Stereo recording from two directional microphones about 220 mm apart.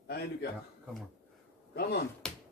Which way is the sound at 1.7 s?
45° left (ahead or behind).